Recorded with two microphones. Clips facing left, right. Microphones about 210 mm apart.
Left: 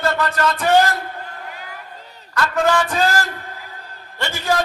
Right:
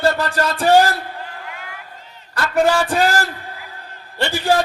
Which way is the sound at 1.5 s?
40° left (ahead or behind).